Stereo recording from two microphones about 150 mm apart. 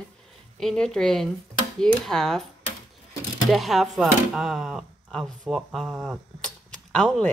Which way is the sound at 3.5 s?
Centre (ahead or behind).